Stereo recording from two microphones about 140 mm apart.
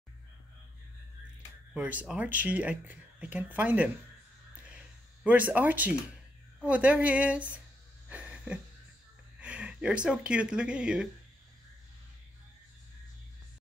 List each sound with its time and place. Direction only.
1.7 s speech: 10° right (ahead or behind)
5.2 s speech: 10° right (ahead or behind)
8.1 s a sound: 10° right (ahead or behind)
9.4 s speech: 10° right (ahead or behind)